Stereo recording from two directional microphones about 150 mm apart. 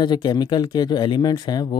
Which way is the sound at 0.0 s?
30° left (ahead or behind).